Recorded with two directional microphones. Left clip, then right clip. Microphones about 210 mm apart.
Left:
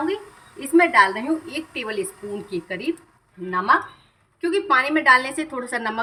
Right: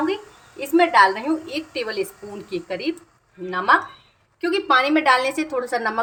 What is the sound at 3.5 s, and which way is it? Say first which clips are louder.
A woman's voice: right 1 dB; 20° right (ahead or behind).